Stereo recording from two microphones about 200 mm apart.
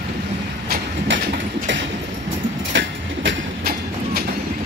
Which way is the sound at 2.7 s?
65° right (ahead or behind).